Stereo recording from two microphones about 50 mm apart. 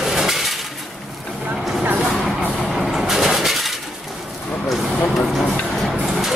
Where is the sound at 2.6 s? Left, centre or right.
Centre.